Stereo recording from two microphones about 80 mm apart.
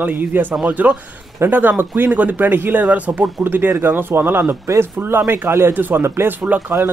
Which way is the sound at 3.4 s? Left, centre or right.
Right.